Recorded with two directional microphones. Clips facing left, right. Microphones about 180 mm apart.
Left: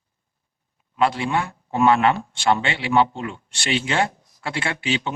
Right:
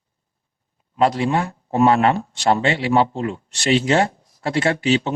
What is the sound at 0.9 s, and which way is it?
Speech, 35° right (ahead or behind).